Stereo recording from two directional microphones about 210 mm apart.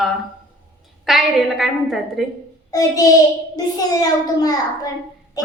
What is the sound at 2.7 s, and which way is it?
Speech, 15° left (ahead or behind).